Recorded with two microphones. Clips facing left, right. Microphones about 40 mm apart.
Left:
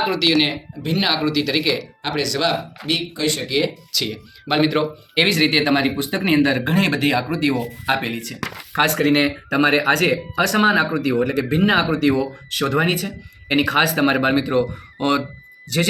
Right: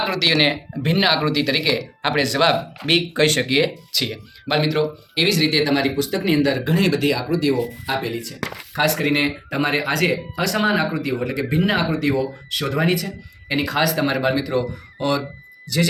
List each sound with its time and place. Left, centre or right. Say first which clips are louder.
0.9 s speech: right 2 dB; centre
2.2 s speech: right 3 dB; right
2.8 s speech: right 5 dB; right
3.5 s speech: right 2 dB; centre
4.4 s speech: left 2 dB; centre
4.8 s speech: left 1 dB; left
6.1 s speech: left 1 dB; left
7.5 s speech: left 1 dB; left
9.1 s speech: left 3 dB; left